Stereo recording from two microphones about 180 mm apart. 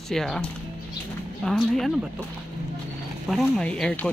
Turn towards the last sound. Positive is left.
turn(degrees=5)  # may be behind; listen again after turning